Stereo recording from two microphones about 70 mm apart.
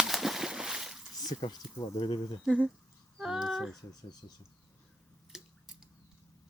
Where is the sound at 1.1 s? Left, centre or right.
Left.